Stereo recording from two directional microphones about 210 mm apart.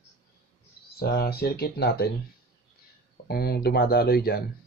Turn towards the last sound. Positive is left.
turn(degrees=45)  # may be behind; listen again after turning